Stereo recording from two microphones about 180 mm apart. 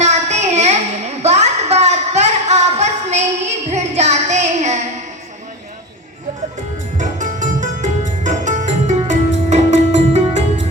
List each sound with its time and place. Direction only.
0.0 s child singing: 40° right (ahead or behind)
6.9 s music: 45° right (ahead or behind)